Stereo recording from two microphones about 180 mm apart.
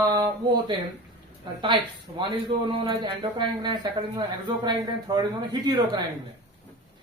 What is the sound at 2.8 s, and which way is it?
Speech, 25° right (ahead or behind).